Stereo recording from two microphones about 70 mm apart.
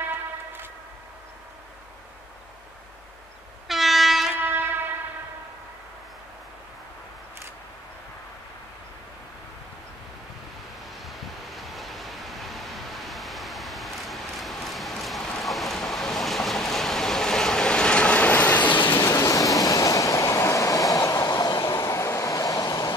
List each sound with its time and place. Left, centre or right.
3.6 s train: centre
4.5 s train: right
11.1 s vehicle: centre; by 18.9 s left
18.9 s train: left